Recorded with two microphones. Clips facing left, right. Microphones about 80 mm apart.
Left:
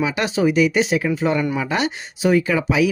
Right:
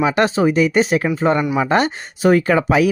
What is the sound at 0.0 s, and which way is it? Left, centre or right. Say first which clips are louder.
Speech: right 4 dB; right.